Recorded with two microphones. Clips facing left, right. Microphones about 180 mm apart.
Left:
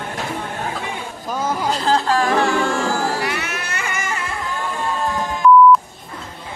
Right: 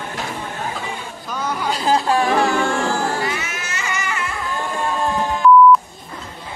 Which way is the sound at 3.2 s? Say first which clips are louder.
Left 1 dB; 65° left (ahead or behind).